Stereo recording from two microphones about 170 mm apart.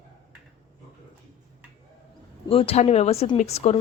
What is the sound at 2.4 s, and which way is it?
A woman's voice, 35° left (ahead or behind).